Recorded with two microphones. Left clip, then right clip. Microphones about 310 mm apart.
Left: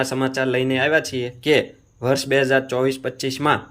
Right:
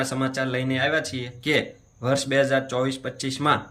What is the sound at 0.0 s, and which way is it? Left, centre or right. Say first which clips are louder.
Speech: left 5 dB; centre.